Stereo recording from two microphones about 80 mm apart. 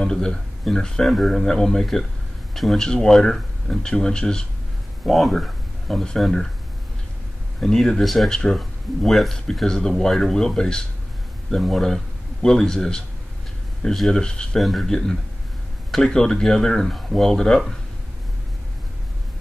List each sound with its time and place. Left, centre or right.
0.0 s speech: centre
7.6 s a man's voice: centre